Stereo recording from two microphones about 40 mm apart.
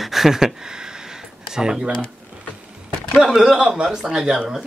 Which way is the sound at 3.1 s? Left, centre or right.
Centre.